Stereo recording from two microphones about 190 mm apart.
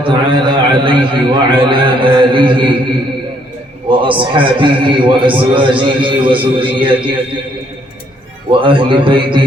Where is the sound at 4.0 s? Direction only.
25° right (ahead or behind).